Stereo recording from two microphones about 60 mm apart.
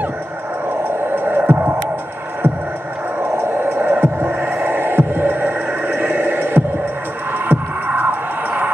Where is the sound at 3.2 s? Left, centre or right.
Right.